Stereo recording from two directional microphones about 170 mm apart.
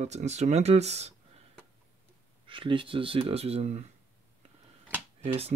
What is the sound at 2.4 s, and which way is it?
Speech, 30° right (ahead or behind).